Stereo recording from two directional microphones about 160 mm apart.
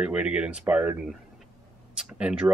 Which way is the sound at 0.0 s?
5° right (ahead or behind).